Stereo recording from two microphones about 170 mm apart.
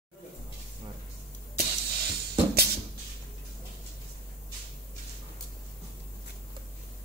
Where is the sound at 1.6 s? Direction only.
70° right (ahead or behind).